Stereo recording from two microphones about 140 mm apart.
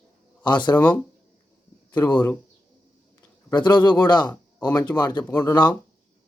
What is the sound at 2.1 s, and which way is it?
Speech, 10° left (ahead or behind).